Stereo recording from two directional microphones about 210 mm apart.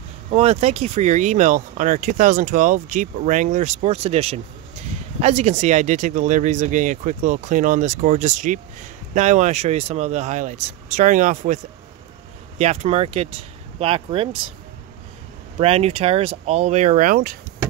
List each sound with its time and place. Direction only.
0.3 s speech: 30° right (ahead or behind)
15.6 s speech: 30° right (ahead or behind)